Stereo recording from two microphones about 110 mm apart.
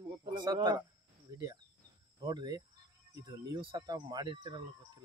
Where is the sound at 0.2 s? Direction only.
45° right (ahead or behind).